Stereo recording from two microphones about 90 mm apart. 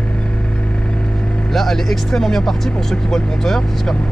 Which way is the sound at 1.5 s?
5° left (ahead or behind).